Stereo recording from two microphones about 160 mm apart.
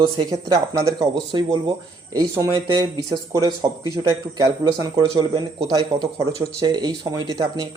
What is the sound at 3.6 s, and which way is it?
Speech, 25° right (ahead or behind).